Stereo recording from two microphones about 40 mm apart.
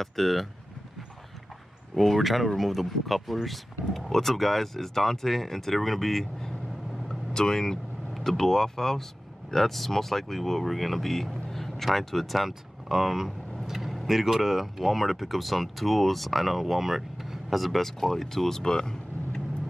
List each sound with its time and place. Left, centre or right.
0.0 s speech: centre
2.0 s speech: centre
7.1 s vehicle: centre
8.1 s speech: centre